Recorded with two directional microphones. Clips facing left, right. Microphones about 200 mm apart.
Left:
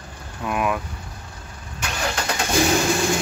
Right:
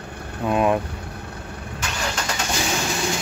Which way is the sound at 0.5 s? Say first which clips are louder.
Right 4 dB; 25° right (ahead or behind).